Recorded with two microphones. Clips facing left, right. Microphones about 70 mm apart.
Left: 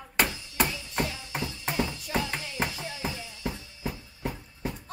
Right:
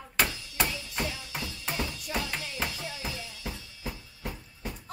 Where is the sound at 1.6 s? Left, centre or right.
Centre.